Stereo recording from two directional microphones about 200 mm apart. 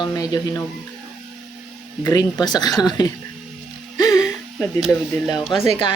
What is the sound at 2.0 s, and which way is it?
Speech, 20° left (ahead or behind).